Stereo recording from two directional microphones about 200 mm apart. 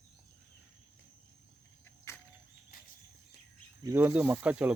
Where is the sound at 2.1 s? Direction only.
15° left (ahead or behind).